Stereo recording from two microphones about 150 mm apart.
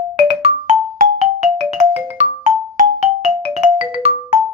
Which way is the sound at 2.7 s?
50° right (ahead or behind).